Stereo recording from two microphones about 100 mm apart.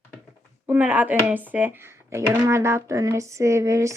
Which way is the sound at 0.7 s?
15° right (ahead or behind).